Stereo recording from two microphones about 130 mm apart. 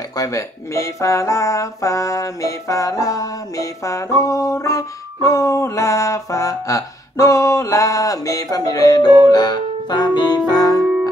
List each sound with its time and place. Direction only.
0.2 s speech: 25° left (ahead or behind)